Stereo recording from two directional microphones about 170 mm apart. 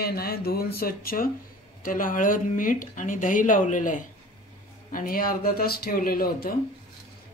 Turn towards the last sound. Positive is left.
turn(degrees=60)  # may be behind; listen again after turning